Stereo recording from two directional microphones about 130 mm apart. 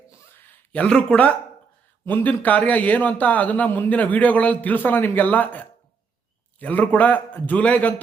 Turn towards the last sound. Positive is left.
turn(degrees=10)  # may be behind; listen again after turning